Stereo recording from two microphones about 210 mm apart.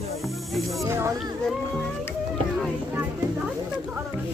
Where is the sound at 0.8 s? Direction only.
10° right (ahead or behind).